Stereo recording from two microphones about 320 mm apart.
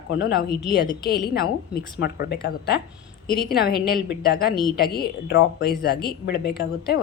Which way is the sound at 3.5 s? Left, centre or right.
Left.